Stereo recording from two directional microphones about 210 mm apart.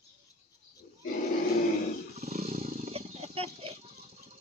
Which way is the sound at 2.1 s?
30° right (ahead or behind).